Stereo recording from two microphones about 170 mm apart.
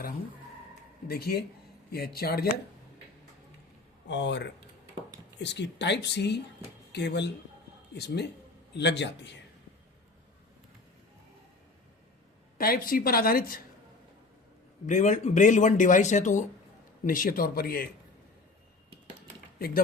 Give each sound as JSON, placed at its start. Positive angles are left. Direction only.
{"t": 1.0, "sound": "speech", "side_deg": 65}
{"t": 4.1, "sound": "speech", "side_deg": 90}
{"t": 7.9, "sound": "speech", "side_deg": 75}
{"t": 8.7, "sound": "speech", "side_deg": 90}
{"t": 12.5, "sound": "speech", "side_deg": 60}
{"t": 14.8, "sound": "speech", "side_deg": 45}
{"t": 17.1, "sound": "speech", "side_deg": 55}
{"t": 19.5, "sound": "speech", "side_deg": 65}